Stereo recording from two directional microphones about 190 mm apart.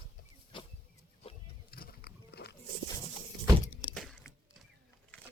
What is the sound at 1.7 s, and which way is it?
Pig, 55° left (ahead or behind).